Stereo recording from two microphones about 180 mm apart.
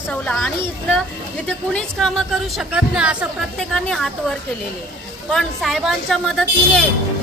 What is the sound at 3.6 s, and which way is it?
Speech, 5° left (ahead or behind).